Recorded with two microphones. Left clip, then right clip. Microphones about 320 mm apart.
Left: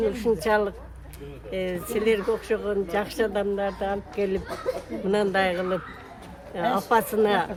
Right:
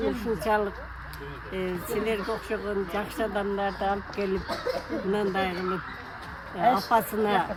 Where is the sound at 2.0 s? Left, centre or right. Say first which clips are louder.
Left 9 dB; centre.